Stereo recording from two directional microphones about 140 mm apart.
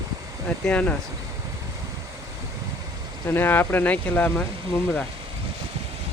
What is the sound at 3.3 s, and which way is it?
Speech, 15° left (ahead or behind).